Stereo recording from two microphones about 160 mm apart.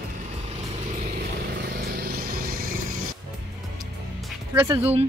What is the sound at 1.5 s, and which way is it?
Vehicle, 90° right.